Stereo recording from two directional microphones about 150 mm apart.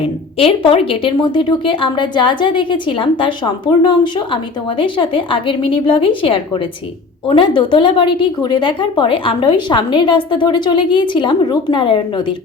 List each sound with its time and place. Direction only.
0.0 s speech: 35° left (ahead or behind)